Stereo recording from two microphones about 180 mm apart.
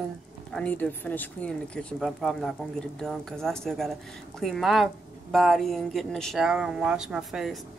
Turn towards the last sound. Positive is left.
turn(degrees=0)  # may be behind; listen again after turning